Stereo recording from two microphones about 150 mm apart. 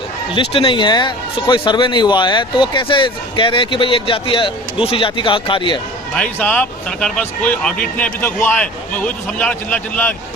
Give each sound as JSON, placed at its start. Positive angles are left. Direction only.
{"t": 0.3, "sound": "speech", "side_deg": 35}
{"t": 6.4, "sound": "speech", "side_deg": 10}